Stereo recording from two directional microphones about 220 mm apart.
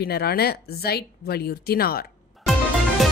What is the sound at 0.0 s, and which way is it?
Speech, 45° left (ahead or behind).